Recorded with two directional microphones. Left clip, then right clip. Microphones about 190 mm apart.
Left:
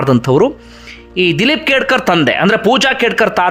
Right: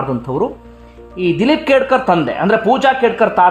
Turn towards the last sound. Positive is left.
turn(degrees=15)  # may be behind; listen again after turning